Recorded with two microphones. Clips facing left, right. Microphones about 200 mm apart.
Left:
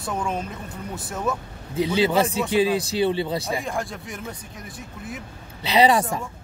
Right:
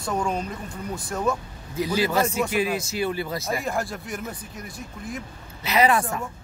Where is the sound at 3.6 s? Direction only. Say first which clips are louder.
Right 1 dB; 5° right (ahead or behind).